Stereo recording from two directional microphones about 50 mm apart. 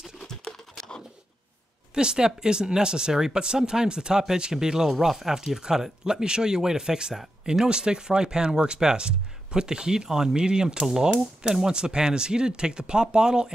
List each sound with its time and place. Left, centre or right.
2.0 s speech: centre